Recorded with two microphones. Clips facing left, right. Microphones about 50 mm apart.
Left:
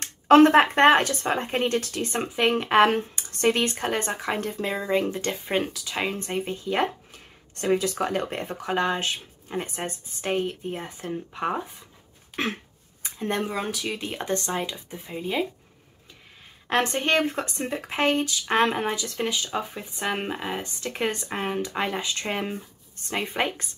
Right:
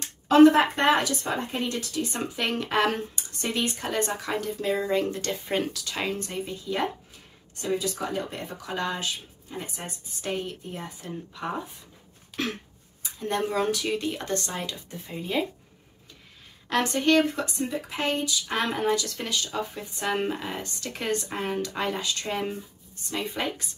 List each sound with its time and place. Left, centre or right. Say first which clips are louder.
0.0 s speech: left 1 dB; left
2.3 s speech: left 7 dB; left
3.3 s speech: left 6 dB; left
4.9 s speech: left 2 dB; left
6.2 s speech: left 4 dB; left
7.5 s speech: left 5 dB; left
13.0 s a sound: left 1 dB; left
13.5 s speech: right 3 dB; centre
14.0 s speech: left 1 dB; left
16.6 s speech: even; left